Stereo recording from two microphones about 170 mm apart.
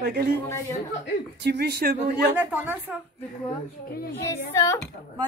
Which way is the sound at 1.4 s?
80° right.